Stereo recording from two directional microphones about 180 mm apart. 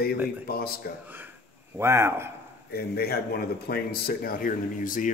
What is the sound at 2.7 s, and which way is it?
Speech, 60° left (ahead or behind).